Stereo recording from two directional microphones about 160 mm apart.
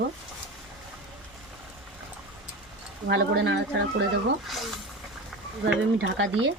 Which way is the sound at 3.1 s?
90° right.